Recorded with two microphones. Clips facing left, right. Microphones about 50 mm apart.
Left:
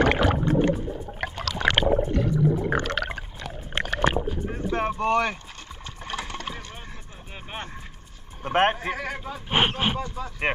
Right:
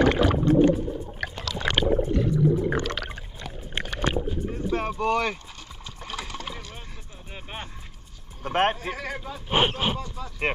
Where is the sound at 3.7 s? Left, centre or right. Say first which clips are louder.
Left 4 dB; left.